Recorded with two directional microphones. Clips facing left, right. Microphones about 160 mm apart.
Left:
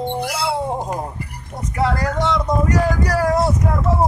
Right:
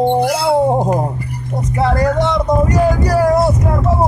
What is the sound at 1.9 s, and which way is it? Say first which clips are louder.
Speech: right 6 dB; 20° right (ahead or behind).